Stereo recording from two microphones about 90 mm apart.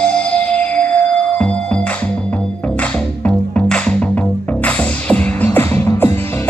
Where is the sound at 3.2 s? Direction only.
10° left (ahead or behind).